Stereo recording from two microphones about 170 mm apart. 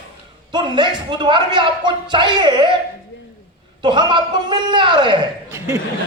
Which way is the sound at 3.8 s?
25° right (ahead or behind).